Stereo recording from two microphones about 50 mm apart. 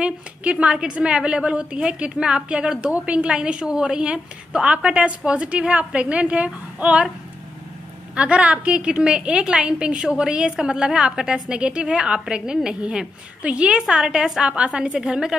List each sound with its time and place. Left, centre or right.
0.0 s a woman's voice: right
2.9 s a woman's voice: right
3.3 s a woman's voice: right
8.2 s a woman's voice: right
14.4 s a woman's voice: right
15.0 s a woman's voice: centre